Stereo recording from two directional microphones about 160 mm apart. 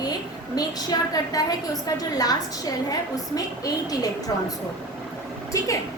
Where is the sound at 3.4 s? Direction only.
25° left (ahead or behind).